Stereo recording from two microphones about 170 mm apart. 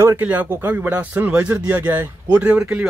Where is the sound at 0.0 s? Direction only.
15° right (ahead or behind).